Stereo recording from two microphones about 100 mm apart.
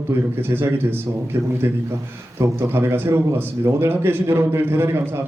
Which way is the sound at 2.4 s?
25° right (ahead or behind).